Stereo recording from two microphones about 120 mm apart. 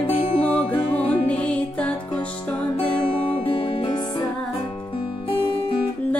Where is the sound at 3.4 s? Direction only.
50° left (ahead or behind).